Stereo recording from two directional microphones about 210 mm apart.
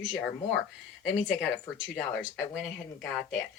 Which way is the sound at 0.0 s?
Centre (ahead or behind).